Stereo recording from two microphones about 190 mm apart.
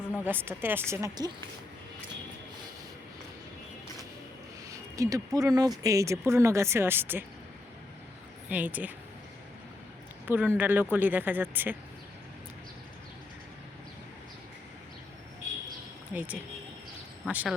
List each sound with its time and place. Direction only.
0.3 s speech: 10° right (ahead or behind)
4.9 s speech: 15° right (ahead or behind)
8.4 s speech: 10° right (ahead or behind)
10.2 s speech: 10° right (ahead or behind)
16.1 s speech: 10° right (ahead or behind)